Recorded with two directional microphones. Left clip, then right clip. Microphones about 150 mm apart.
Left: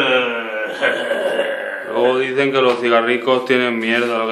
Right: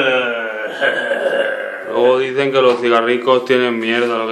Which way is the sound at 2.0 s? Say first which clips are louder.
Right 2 dB; 10° right (ahead or behind).